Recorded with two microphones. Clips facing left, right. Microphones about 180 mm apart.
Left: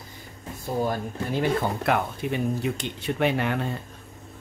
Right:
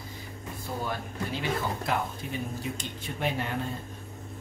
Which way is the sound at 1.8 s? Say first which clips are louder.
Left 6 dB; 65° left (ahead or behind).